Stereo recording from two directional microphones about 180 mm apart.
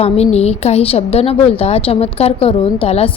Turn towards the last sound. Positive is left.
turn(degrees=30)  # may be behind; listen again after turning